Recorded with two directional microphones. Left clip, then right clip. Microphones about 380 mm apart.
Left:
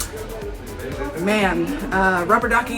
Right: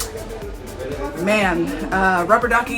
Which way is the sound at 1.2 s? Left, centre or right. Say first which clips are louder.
Right 2 dB; centre.